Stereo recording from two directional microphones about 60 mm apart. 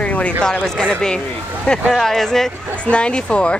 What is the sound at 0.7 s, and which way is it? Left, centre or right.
Speech, centre.